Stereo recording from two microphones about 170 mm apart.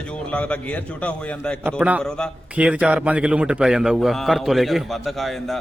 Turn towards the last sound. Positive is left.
turn(degrees=0)  # may be behind; listen again after turning